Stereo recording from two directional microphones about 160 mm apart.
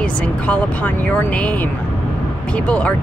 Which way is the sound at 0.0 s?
10° left (ahead or behind).